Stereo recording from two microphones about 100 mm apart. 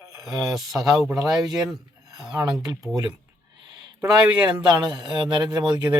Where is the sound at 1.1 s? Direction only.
40° right (ahead or behind).